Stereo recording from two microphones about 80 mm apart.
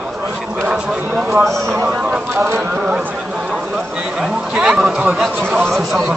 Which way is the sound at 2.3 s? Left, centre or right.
Right.